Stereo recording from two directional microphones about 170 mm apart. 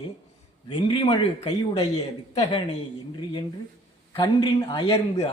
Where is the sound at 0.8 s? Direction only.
30° left (ahead or behind).